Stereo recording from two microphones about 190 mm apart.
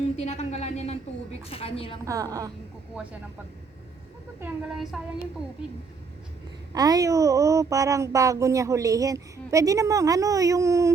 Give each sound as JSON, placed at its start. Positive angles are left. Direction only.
{"t": 0.2, "sound": "a woman's voice", "side_deg": 35}
{"t": 2.0, "sound": "a woman's voice", "side_deg": -20}
{"t": 2.9, "sound": "speech", "side_deg": -5}
{"t": 4.4, "sound": "child singing", "side_deg": -5}
{"t": 6.7, "sound": "speech", "side_deg": -20}